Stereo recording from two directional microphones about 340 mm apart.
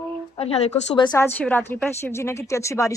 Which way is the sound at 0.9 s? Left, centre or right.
Centre.